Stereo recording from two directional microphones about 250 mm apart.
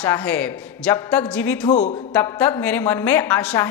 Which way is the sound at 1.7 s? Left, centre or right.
Left.